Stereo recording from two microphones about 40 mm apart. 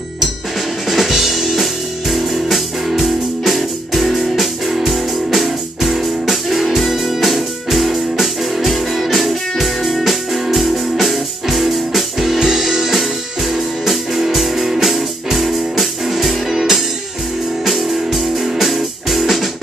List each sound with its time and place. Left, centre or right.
0.8 s music: centre
12.4 s music: centre